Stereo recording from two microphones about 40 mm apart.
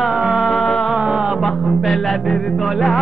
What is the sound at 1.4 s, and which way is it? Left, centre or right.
Music, centre.